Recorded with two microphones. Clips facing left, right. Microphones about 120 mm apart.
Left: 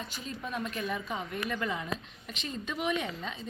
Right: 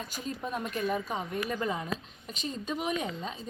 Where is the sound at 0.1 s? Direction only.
40° right (ahead or behind).